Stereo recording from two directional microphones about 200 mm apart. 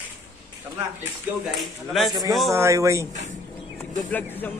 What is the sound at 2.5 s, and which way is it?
Speech, 15° right (ahead or behind).